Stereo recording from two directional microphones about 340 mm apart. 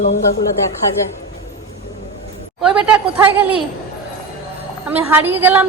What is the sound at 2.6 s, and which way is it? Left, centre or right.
A woman's voice, centre.